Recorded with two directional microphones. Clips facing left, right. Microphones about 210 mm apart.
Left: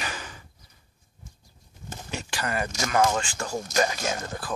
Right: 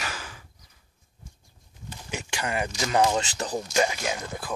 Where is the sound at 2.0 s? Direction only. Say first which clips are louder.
Even; 15° right (ahead or behind).